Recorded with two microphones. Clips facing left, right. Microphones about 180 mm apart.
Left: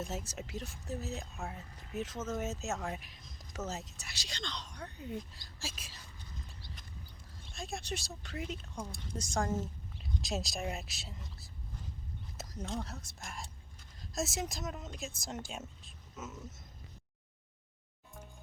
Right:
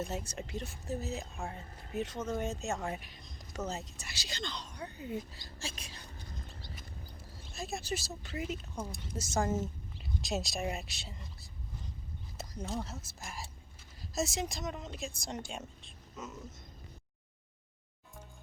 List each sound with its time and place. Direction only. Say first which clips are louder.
0.0 s speech: right 2 dB; centre (ahead or behind)
6.3 s clip-clop: right 1 dB; 50° right (ahead or behind)
7.5 s speech: right 3 dB; 5° right (ahead or behind)